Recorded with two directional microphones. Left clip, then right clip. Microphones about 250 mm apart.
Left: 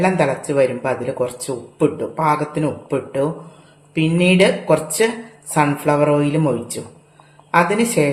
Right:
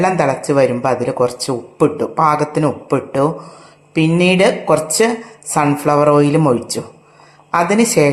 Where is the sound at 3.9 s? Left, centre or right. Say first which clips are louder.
Right 3 dB; centre.